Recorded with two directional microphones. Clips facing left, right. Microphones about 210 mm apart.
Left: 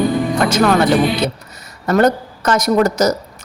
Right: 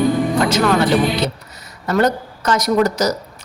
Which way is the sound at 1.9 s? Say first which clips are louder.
Left 3 dB; 50° left (ahead or behind).